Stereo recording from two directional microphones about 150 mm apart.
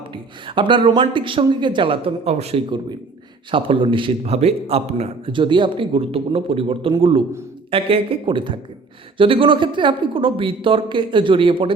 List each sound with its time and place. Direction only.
0.1 s a man's voice: 35° right (ahead or behind)